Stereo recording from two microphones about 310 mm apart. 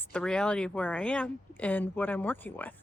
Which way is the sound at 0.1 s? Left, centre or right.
Centre.